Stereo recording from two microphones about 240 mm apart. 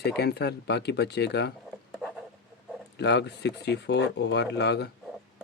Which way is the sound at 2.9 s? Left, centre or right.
Left.